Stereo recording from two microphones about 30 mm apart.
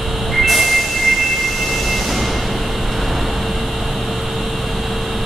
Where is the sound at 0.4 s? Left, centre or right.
Centre.